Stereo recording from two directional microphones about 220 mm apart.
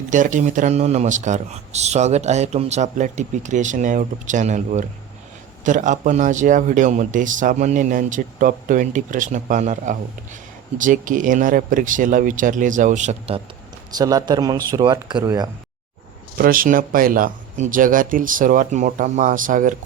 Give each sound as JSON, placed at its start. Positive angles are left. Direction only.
{"t": 0.1, "sound": "a man's voice", "side_deg": -35}
{"t": 14.0, "sound": "speech", "side_deg": -15}
{"t": 16.4, "sound": "a man's voice", "side_deg": -40}